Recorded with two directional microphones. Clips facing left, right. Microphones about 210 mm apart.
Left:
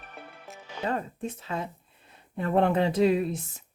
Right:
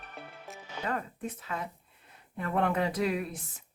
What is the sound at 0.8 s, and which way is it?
Speech, 25° left (ahead or behind).